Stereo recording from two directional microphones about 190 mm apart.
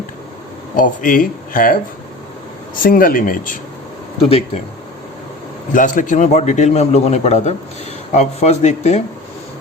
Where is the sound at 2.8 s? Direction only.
50° left (ahead or behind).